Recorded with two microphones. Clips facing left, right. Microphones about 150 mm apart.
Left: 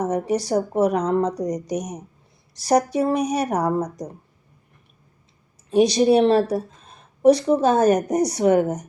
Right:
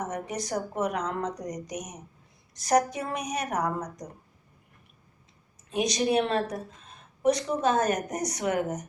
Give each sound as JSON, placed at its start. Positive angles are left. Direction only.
{"t": 0.0, "sound": "speech", "side_deg": 35}
{"t": 5.7, "sound": "speech", "side_deg": 35}